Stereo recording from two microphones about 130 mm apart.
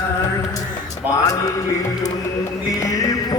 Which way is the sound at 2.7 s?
25° left (ahead or behind).